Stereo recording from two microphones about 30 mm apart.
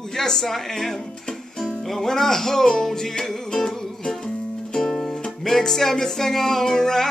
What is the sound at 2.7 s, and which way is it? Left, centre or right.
Music, centre.